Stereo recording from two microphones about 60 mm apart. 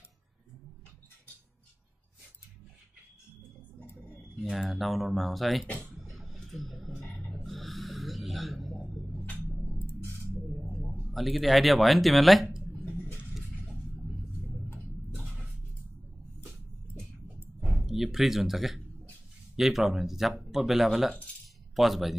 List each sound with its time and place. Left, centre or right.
4.4 s speech: centre
5.9 s music: centre
7.4 s a sound: centre
9.8 s music: left
11.1 s speech: centre
13.3 s music: centre
17.6 s a sound: centre
19.5 s speech: centre